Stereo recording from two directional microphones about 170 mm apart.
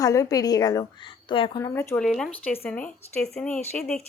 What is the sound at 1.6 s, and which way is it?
Speech, 15° left (ahead or behind).